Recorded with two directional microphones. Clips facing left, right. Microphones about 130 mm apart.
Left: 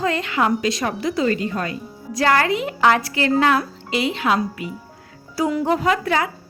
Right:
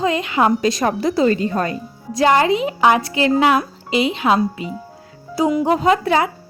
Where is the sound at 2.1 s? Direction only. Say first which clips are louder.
Right 4 dB; 20° right (ahead or behind).